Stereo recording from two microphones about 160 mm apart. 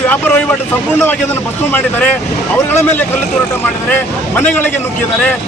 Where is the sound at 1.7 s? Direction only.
10° left (ahead or behind).